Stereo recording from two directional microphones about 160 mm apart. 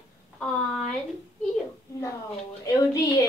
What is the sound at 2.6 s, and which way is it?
Speech, 20° left (ahead or behind).